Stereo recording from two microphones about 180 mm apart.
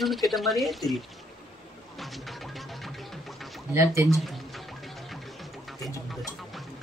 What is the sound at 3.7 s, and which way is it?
Speech, 15° right (ahead or behind).